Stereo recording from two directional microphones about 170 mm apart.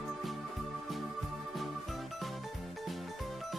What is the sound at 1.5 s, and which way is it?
Music, centre (ahead or behind).